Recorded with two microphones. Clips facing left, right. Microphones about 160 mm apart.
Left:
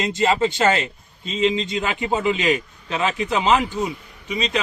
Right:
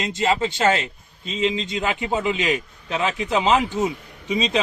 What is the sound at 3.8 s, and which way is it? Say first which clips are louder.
Speech: right 3 dB; 25° right (ahead or behind).